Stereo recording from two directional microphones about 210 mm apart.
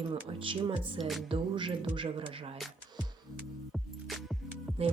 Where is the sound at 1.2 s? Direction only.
25° right (ahead or behind).